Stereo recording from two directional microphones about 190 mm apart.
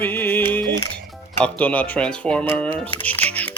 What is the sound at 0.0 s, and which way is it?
Music, 10° left (ahead or behind).